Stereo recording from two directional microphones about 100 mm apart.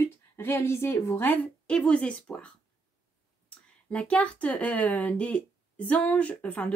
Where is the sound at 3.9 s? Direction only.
10° left (ahead or behind).